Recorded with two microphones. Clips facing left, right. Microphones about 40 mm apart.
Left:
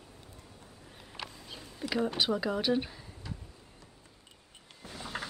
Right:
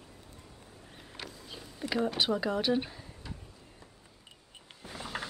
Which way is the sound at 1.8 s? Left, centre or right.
Centre.